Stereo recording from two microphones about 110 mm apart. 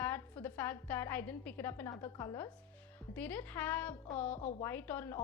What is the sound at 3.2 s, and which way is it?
A woman's voice, 15° left (ahead or behind).